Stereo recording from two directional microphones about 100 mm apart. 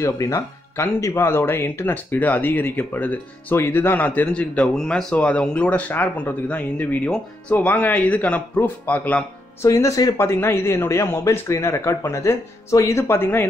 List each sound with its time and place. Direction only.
0.0 s speech: 30° left (ahead or behind); by 9.2 s 15° left (ahead or behind)
9.6 s speech: 30° left (ahead or behind)
10.1 s a man's voice: 25° left (ahead or behind)